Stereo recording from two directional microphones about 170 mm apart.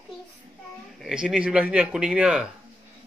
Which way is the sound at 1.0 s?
5° right (ahead or behind).